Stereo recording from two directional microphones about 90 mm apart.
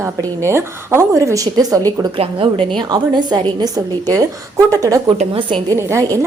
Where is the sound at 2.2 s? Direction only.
85° right.